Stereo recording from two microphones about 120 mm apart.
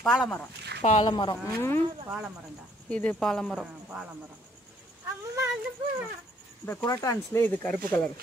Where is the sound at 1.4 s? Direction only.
20° left (ahead or behind).